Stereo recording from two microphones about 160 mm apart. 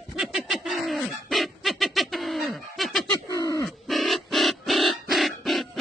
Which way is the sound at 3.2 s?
20° left (ahead or behind).